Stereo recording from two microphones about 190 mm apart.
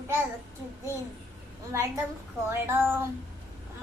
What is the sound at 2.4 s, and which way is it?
Speech, 10° right (ahead or behind).